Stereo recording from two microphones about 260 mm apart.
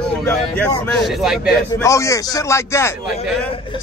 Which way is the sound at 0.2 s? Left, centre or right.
Centre.